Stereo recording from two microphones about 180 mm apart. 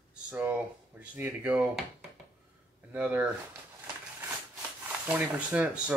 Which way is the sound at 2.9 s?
5° right (ahead or behind).